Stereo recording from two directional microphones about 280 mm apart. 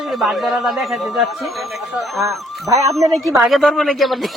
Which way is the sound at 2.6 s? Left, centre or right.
Centre.